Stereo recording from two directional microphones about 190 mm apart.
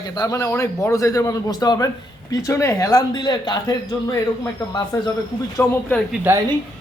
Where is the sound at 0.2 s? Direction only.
15° left (ahead or behind).